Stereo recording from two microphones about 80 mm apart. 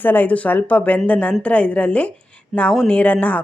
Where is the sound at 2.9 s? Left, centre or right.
Centre.